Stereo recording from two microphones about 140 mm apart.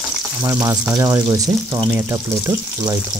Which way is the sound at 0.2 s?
10° right (ahead or behind).